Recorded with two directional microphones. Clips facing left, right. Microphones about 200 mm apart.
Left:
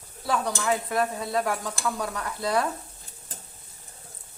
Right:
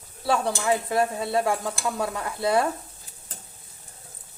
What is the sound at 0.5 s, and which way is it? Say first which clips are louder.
Stir: right 2 dB; 20° right (ahead or behind).